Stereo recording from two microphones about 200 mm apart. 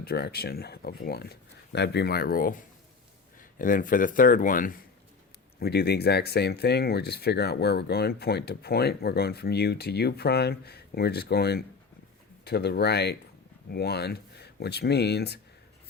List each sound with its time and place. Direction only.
0.0 s speech: 50° left (ahead or behind)
3.6 s speech: 45° left (ahead or behind)
5.5 s speech: 55° left (ahead or behind)